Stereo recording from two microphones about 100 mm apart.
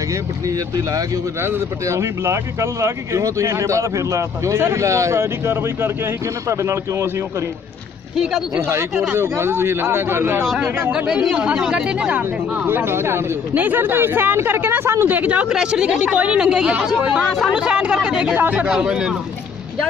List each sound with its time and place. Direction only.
1.4 s speech: 25° right (ahead or behind)
8.5 s speech: 25° right (ahead or behind)
10.9 s speech: 10° right (ahead or behind)